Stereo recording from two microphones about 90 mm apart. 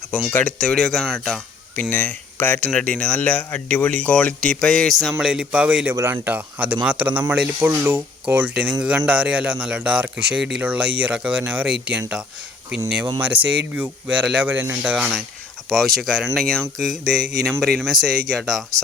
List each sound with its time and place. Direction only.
0.3 s speech: 20° left (ahead or behind)
0.6 s speech: 5° left (ahead or behind)
1.7 s speech: 20° left (ahead or behind); by 5.1 s centre (ahead or behind)
5.2 s a man's voice: 10° right (ahead or behind)
5.9 s a man's voice: 25° right (ahead or behind)
7.7 s a man's voice: 25° right (ahead or behind)
13.1 s a man's voice: 15° right (ahead or behind)
14.9 s speech: centre (ahead or behind)